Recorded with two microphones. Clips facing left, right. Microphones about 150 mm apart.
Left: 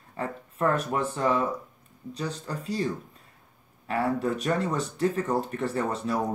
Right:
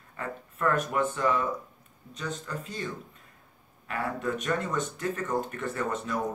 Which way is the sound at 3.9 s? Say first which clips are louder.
Left 5 dB; 35° left (ahead or behind).